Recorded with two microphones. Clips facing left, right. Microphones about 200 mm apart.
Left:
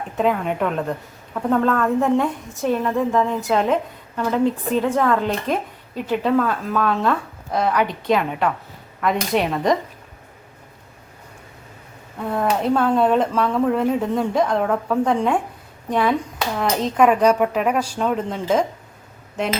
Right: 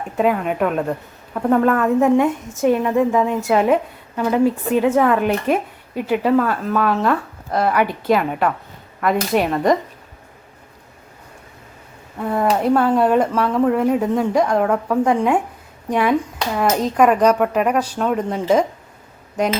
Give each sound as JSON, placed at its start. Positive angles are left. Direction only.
{"t": 0.2, "sound": "a woman's voice", "side_deg": -5}
{"t": 12.2, "sound": "a woman's voice", "side_deg": 0}